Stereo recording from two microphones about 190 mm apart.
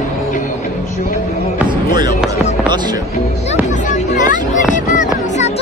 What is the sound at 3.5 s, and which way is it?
Music, 40° left (ahead or behind).